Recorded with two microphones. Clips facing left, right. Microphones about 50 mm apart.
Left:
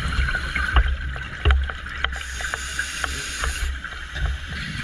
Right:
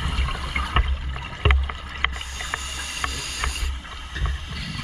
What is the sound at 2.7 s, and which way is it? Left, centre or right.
Boat, left.